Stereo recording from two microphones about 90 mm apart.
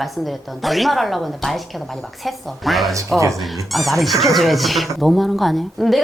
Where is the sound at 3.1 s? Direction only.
35° right (ahead or behind).